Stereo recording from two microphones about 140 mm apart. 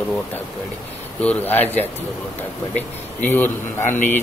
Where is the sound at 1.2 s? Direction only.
15° left (ahead or behind).